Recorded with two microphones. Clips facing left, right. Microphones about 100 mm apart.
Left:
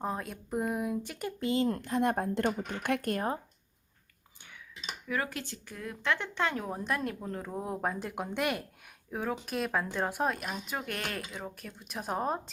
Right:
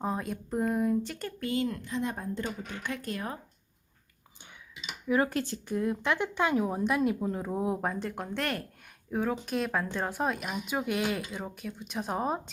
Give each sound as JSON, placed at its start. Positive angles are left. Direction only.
{"t": 0.0, "sound": "speech", "side_deg": 0}
{"t": 1.4, "sound": "speech", "side_deg": 25}
{"t": 1.8, "sound": "a woman's voice", "side_deg": 55}
{"t": 3.2, "sound": "speech", "side_deg": 30}
{"t": 5.0, "sound": "speech", "side_deg": -25}
{"t": 5.3, "sound": "speech", "side_deg": -40}
{"t": 5.6, "sound": "speech", "side_deg": -20}
{"t": 9.0, "sound": "speech", "side_deg": 0}